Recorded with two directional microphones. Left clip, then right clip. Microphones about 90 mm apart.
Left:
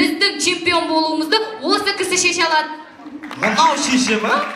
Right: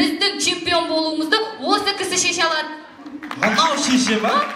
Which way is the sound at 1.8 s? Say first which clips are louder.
Left 3 dB; 20° left (ahead or behind).